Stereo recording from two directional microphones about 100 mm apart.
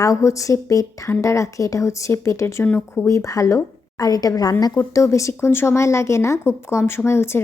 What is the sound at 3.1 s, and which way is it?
Speech, 35° left (ahead or behind).